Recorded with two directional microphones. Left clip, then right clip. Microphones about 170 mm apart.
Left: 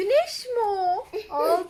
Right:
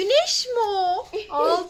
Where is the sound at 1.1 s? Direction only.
5° right (ahead or behind).